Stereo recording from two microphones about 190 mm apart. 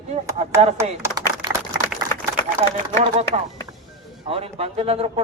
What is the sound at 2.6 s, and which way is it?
A man's voice, 35° right (ahead or behind).